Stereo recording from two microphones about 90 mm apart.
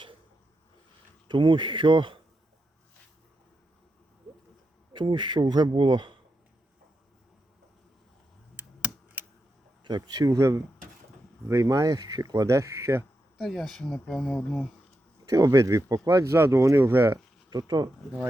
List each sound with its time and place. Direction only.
1.3 s a man's voice: 65° right (ahead or behind)
4.9 s a man's voice: 60° right (ahead or behind)
8.5 s computer keyboard: 20° right (ahead or behind)
9.8 s speech: 55° right (ahead or behind); by 13.1 s 35° right (ahead or behind)
13.4 s speech: centre (ahead or behind)
15.3 s speech: 40° right (ahead or behind)
17.5 s speech: 50° right (ahead or behind)